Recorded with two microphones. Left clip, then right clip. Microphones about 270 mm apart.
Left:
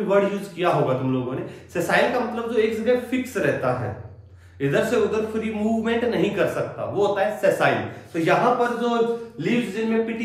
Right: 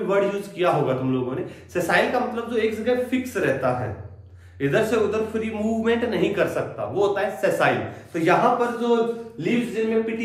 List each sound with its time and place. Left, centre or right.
0.1 s a man's voice: centre